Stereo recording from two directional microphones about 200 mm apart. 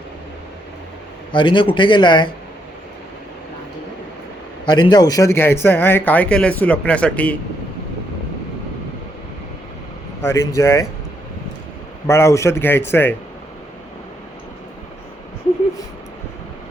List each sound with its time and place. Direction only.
1.3 s a man's voice: 25° left (ahead or behind)
4.6 s a man's voice: 20° left (ahead or behind)
10.2 s a man's voice: 10° left (ahead or behind)
12.0 s a man's voice: 15° left (ahead or behind)